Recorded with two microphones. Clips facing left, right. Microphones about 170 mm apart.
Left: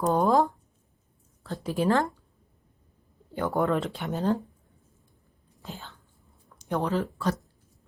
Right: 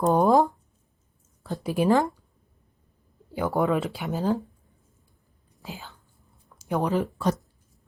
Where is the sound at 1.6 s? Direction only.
15° right (ahead or behind).